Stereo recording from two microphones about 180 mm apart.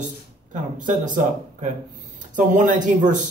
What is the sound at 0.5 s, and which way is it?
Speech, 45° right (ahead or behind).